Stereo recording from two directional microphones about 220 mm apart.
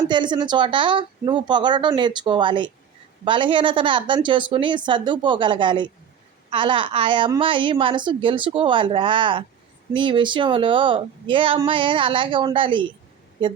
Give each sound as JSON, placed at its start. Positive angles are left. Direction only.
{"t": 0.1, "sound": "a woman's voice", "side_deg": -20}